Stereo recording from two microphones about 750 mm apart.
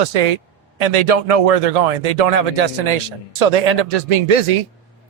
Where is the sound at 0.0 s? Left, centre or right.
Right.